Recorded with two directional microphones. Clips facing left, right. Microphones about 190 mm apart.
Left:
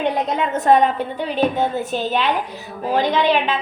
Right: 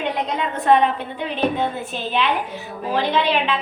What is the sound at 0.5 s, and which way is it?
Speech, 45° left (ahead or behind).